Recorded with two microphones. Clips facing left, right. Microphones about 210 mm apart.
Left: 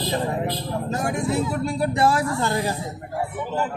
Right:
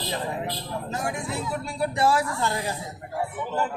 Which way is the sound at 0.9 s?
40° left (ahead or behind).